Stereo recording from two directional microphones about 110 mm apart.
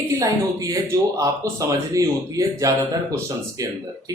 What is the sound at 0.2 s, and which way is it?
Speech, 30° right (ahead or behind).